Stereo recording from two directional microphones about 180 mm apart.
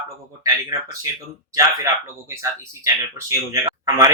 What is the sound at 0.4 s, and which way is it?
Speech, 20° right (ahead or behind).